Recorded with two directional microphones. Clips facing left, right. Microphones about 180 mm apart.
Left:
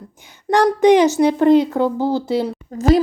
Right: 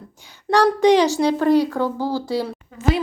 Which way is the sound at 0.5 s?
20° left (ahead or behind).